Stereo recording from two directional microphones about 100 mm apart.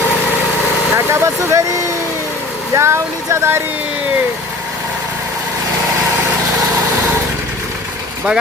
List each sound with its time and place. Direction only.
0.9 s speech: 25° right (ahead or behind)
2.7 s speech: 30° right (ahead or behind)